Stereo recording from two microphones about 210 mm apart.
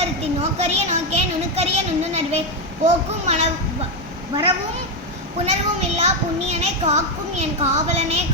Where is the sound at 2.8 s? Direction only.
30° right (ahead or behind).